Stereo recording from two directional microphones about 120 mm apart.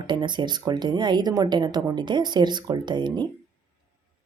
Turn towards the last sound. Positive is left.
turn(degrees=-40)  # may be behind; listen again after turning